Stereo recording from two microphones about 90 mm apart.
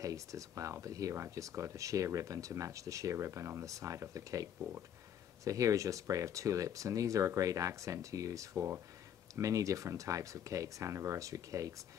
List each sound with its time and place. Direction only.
0.0 s speech: 40° right (ahead or behind)